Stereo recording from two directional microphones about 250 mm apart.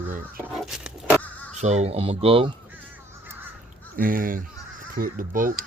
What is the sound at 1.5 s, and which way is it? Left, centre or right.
Speech, right.